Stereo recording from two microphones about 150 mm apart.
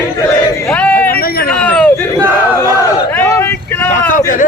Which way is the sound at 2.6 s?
20° left (ahead or behind).